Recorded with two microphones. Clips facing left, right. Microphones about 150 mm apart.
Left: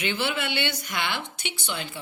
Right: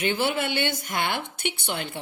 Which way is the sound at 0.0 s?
45° right (ahead or behind).